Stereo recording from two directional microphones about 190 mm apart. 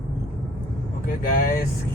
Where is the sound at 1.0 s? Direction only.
45° left (ahead or behind).